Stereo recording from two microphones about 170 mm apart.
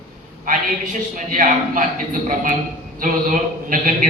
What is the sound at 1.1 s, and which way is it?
Speech, 50° right (ahead or behind).